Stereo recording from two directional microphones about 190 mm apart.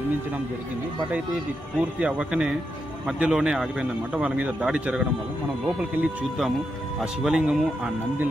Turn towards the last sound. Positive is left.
turn(degrees=-5)  # may be behind; listen again after turning